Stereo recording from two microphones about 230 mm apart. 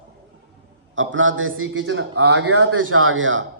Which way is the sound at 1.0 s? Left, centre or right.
Right.